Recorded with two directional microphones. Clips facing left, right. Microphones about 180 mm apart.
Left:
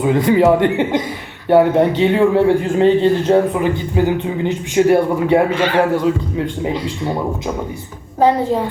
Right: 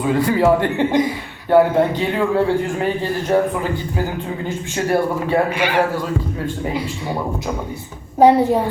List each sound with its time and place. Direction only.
0.0 s speech: 20° left (ahead or behind)
5.5 s a woman's voice: 10° right (ahead or behind)
8.2 s a woman's voice: 15° right (ahead or behind)